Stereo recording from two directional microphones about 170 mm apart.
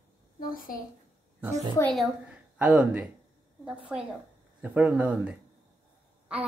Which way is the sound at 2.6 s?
10° right (ahead or behind).